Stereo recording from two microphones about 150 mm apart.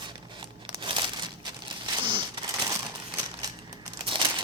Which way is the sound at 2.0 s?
35° right (ahead or behind).